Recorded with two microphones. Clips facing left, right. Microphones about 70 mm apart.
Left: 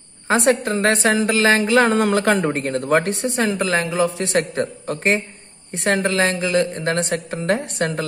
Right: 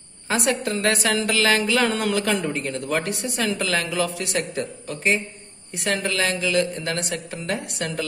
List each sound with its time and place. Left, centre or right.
0.3 s a woman's voice: left
4.3 s a man's voice: left
5.7 s a woman's voice: left